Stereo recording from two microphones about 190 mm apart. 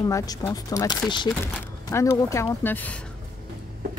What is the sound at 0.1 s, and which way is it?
Speech, 20° left (ahead or behind).